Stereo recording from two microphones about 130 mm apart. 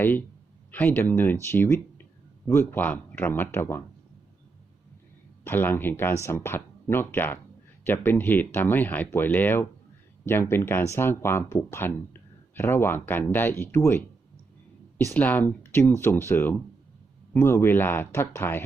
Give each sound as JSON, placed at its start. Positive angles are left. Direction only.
{"t": 0.0, "sound": "speech", "side_deg": 15}
{"t": 5.5, "sound": "speech", "side_deg": 15}